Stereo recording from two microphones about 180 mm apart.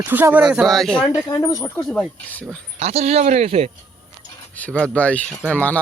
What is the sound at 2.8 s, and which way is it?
Speech, 35° right (ahead or behind).